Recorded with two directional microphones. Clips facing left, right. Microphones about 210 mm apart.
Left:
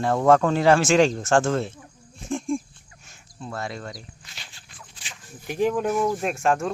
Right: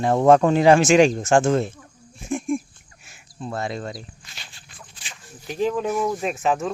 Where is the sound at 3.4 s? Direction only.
20° right (ahead or behind).